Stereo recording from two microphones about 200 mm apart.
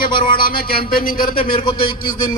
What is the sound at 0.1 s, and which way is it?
Speech, 25° left (ahead or behind).